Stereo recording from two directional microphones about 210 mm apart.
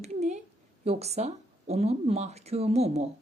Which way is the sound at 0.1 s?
35° right (ahead or behind).